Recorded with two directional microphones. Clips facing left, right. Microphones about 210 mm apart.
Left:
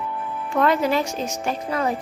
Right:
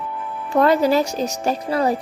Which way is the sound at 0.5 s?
35° right (ahead or behind).